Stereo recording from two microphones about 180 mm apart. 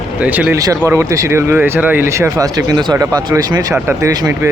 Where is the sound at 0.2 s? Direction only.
10° right (ahead or behind).